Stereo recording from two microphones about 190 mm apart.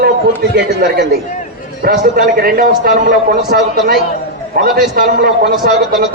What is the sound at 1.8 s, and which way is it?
A man's voice, 45° right (ahead or behind).